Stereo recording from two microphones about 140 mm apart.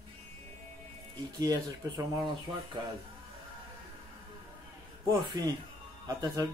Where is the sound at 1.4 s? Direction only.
30° right (ahead or behind).